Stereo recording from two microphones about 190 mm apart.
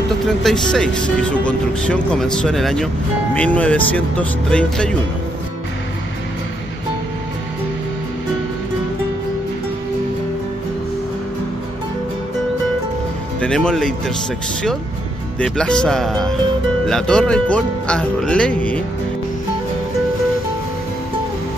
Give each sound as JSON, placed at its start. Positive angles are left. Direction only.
{"t": 0.3, "sound": "speech", "side_deg": 0}
{"t": 13.4, "sound": "speech", "side_deg": 5}
{"t": 15.3, "sound": "speech", "side_deg": 5}